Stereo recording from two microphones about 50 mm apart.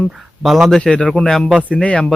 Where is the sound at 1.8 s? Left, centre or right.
Left.